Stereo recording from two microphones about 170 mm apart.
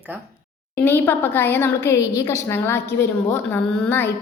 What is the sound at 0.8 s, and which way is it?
A woman's voice, 10° left (ahead or behind).